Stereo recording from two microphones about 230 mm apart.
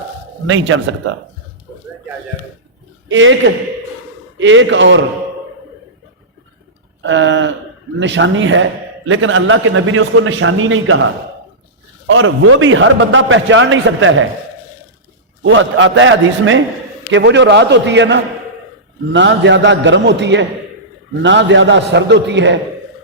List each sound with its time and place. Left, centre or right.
0.4 s a man's voice: right
3.1 s a man's voice: right
7.0 s a man's voice: right
12.0 s a man's voice: right
15.4 s a man's voice: right